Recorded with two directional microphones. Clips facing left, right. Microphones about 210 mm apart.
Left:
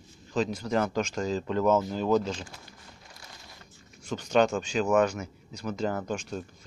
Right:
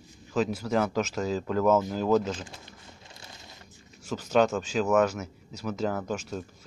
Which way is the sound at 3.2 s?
20° right (ahead or behind).